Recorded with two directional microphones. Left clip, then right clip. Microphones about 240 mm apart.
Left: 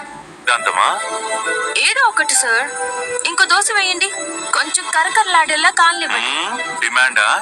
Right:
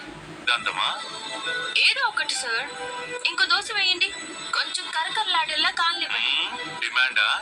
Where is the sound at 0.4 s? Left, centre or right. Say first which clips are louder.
Left 9 dB; left.